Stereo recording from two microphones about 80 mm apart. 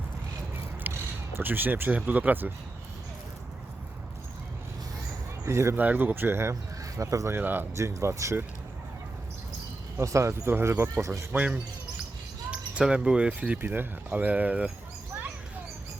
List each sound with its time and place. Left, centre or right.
0.9 s single-lens reflex camera: right
2.0 s speech: centre
5.5 s speech: right
5.7 s speech: right
6.9 s speech: right
7.3 s speech: right
7.8 s speech: right
10.0 s speech: right
11.3 s speech: centre
13.6 s speech: right